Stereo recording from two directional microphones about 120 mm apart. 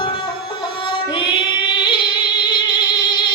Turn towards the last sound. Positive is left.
turn(degrees=40)  # may be behind; listen again after turning